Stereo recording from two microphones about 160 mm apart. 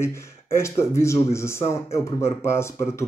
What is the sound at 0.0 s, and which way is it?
Speech, 15° left (ahead or behind).